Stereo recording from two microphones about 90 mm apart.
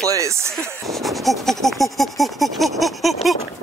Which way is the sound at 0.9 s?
Centre (ahead or behind).